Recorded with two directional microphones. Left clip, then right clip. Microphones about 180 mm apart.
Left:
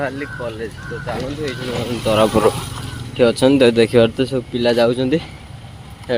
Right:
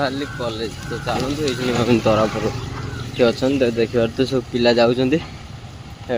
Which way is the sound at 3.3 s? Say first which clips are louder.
Left 6 dB; 30° left (ahead or behind).